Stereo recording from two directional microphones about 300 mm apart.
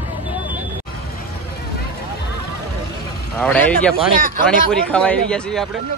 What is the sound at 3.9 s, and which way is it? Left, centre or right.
Speech, right.